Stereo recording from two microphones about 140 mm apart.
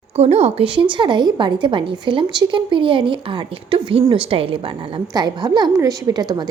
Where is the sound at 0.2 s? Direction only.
45° right (ahead or behind).